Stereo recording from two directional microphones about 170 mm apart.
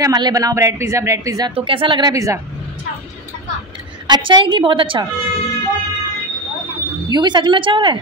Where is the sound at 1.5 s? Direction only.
30° right (ahead or behind).